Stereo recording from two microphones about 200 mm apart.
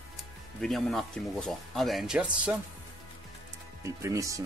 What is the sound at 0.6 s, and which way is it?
Speech, centre (ahead or behind).